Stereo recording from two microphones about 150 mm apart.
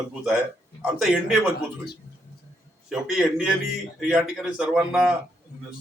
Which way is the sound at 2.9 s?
Centre (ahead or behind).